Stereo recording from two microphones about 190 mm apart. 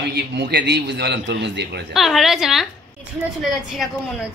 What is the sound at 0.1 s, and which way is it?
A man's voice, 60° right (ahead or behind).